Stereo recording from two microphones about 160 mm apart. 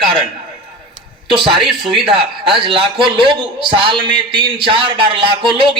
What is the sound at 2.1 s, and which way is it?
A man's voice, 35° right (ahead or behind).